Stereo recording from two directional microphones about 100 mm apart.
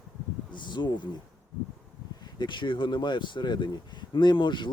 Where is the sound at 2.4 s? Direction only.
50° left (ahead or behind).